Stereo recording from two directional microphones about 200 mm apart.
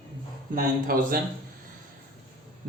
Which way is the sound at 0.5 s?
45° right (ahead or behind).